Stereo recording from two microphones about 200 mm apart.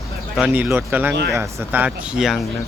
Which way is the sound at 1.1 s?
60° right (ahead or behind).